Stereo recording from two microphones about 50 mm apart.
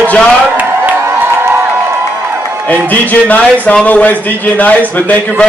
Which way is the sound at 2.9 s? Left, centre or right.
Left.